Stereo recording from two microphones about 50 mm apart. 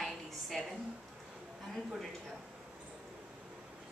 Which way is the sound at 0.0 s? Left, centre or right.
Centre.